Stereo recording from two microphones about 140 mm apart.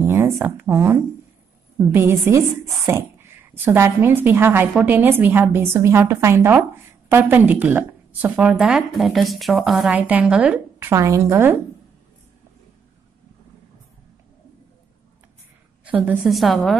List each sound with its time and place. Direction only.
0.0 s speech: 20° right (ahead or behind)
10.9 s a woman's voice: 20° right (ahead or behind)
15.8 s a woman's voice: 10° right (ahead or behind)